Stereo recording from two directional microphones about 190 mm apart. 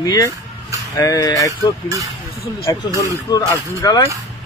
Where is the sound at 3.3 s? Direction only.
20° left (ahead or behind).